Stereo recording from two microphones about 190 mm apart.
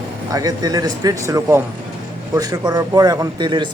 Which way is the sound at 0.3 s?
20° right (ahead or behind).